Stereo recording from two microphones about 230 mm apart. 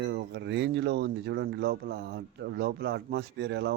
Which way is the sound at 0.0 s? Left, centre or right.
Right.